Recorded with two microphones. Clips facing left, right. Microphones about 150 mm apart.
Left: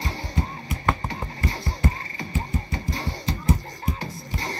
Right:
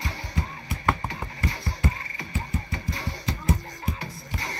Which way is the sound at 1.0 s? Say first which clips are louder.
Left 2 dB; 30° left (ahead or behind).